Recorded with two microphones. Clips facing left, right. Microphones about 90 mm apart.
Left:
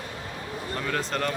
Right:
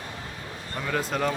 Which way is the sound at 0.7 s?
5° right (ahead or behind).